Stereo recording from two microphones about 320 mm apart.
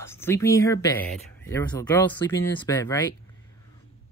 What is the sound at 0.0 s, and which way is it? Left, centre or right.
Speech, centre.